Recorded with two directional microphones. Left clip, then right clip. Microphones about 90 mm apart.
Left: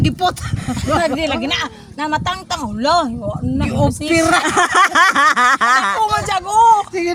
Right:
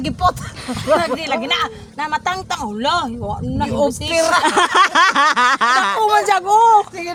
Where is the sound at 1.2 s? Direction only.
60° right (ahead or behind).